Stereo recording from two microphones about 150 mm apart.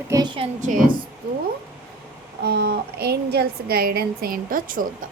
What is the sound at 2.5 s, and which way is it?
A woman's voice, 90° right.